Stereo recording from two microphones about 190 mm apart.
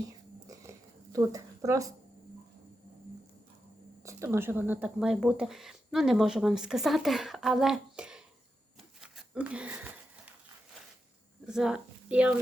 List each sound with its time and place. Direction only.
0.4 s a sound: 15° right (ahead or behind)
4.0 s speech: 15° right (ahead or behind)
9.0 s wheeze: 5° right (ahead or behind)
11.4 s a woman's voice: 5° right (ahead or behind)